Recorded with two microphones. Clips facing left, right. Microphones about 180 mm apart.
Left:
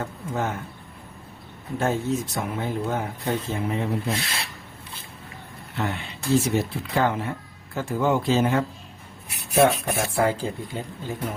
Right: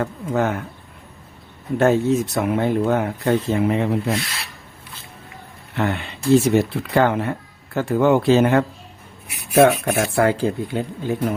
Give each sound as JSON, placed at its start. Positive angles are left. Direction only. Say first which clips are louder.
{"t": 0.0, "sound": "speech", "louder": "right 7 dB", "side_deg": -70}
{"t": 1.8, "sound": "speech", "louder": "right 8 dB", "side_deg": -70}
{"t": 5.7, "sound": "speech", "louder": "right 6 dB", "side_deg": -65}